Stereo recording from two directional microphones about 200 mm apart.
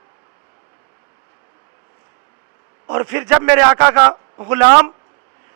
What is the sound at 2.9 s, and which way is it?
A man's voice, 10° right (ahead or behind).